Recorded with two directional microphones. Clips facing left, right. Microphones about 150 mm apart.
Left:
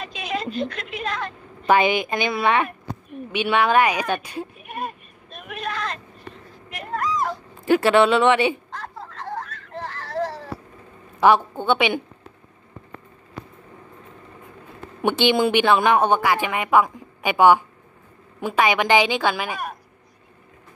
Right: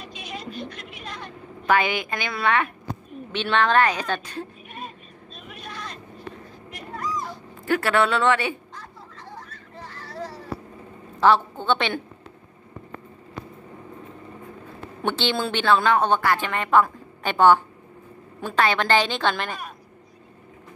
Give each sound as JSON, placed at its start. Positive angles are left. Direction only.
{"t": 0.0, "sound": "a sound", "side_deg": 90}
{"t": 1.7, "sound": "a woman's voice", "side_deg": 20}
{"t": 4.6, "sound": "vehicle", "side_deg": 60}
{"t": 6.8, "sound": "cat", "side_deg": 80}
{"t": 7.6, "sound": "a woman's voice", "side_deg": 20}
{"t": 8.7, "sound": "a sound", "side_deg": 80}
{"t": 11.1, "sound": "a woman's voice", "side_deg": 15}
{"t": 15.0, "sound": "a woman's voice", "side_deg": 15}